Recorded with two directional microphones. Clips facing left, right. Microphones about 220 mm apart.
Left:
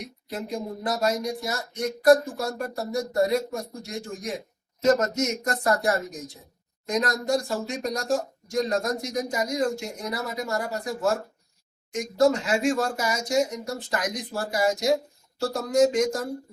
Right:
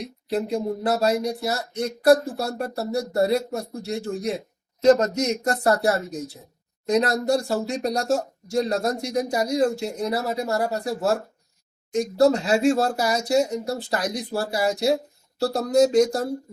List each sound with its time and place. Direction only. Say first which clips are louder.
0.0 s speech: right 8 dB; 30° right (ahead or behind)